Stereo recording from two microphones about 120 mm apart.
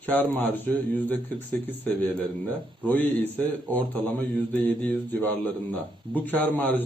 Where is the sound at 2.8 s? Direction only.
15° left (ahead or behind).